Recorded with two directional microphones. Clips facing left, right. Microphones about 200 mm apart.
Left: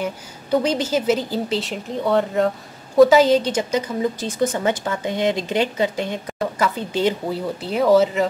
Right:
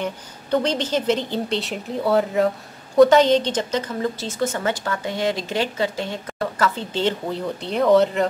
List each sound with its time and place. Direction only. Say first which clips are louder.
0.0 s a woman's voice: left 1 dB; 10° left (ahead or behind)